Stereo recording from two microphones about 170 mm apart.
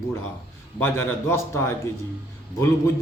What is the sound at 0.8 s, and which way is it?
Speech, 15° left (ahead or behind).